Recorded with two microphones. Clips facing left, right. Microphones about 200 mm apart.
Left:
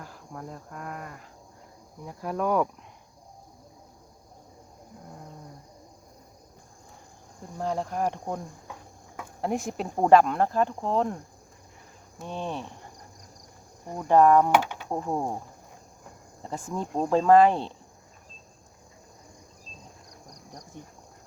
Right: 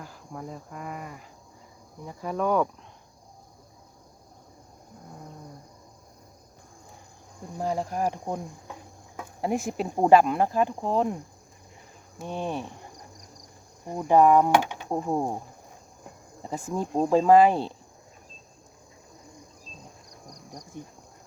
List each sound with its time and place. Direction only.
0.0 s speech: centre (ahead or behind)
2.0 s cricket: centre (ahead or behind)
7.6 s speech: 5° right (ahead or behind)
12.2 s speech: 10° right (ahead or behind)
13.8 s speech: 10° right (ahead or behind)
16.4 s speech: 5° right (ahead or behind)
20.3 s cricket: 20° right (ahead or behind)